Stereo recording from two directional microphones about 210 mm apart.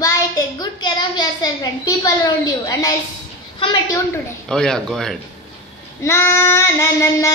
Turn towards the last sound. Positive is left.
turn(degrees=15)  # may be behind; listen again after turning